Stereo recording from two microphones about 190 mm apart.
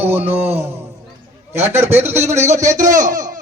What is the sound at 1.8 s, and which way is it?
A man's voice, 10° right (ahead or behind).